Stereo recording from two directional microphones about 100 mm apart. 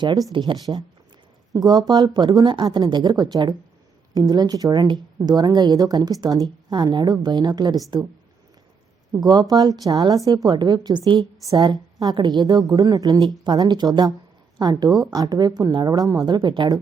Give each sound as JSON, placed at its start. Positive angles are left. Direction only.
{"t": 0.0, "sound": "speech", "side_deg": -40}
{"t": 0.7, "sound": "speech", "side_deg": -25}
{"t": 1.5, "sound": "a woman's voice", "side_deg": -40}
{"t": 9.1, "sound": "a woman's voice", "side_deg": -40}